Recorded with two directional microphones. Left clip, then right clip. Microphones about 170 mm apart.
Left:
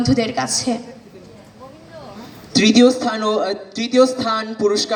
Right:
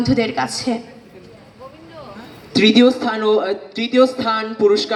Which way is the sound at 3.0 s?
40° left (ahead or behind).